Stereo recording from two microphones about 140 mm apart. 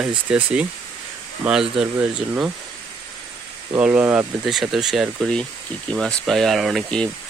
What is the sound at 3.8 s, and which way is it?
Speech, 15° right (ahead or behind).